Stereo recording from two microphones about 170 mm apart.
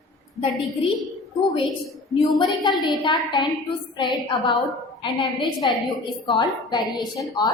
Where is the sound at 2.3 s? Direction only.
25° left (ahead or behind).